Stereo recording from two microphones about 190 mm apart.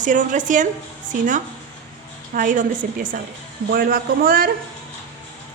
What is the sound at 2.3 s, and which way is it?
A woman's voice, 45° right (ahead or behind).